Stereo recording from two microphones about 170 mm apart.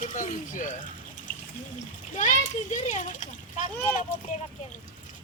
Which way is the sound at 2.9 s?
45° left (ahead or behind).